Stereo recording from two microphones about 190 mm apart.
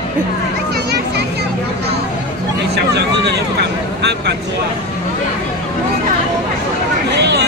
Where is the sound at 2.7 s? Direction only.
60° right (ahead or behind).